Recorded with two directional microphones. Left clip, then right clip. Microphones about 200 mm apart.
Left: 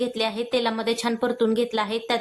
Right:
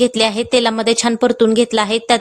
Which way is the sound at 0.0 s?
45° right (ahead or behind).